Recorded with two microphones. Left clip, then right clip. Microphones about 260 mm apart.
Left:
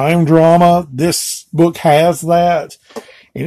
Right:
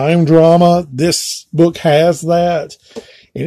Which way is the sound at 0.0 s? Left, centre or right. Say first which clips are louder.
Right 1 dB; centre.